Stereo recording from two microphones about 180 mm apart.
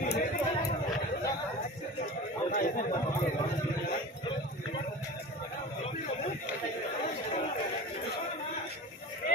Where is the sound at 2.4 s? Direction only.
50° left (ahead or behind).